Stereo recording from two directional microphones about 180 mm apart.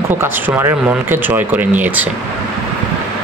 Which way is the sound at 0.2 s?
15° right (ahead or behind).